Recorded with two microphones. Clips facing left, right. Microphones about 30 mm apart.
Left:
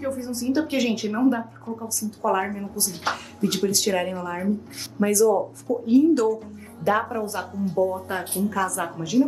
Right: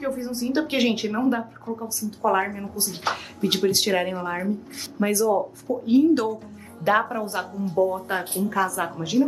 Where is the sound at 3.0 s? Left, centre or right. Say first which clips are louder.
Right 1 dB; centre.